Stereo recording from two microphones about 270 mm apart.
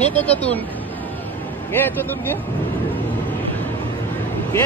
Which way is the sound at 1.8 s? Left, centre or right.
Centre.